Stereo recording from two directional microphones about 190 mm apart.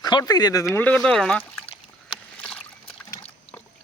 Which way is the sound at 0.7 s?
10° left (ahead or behind).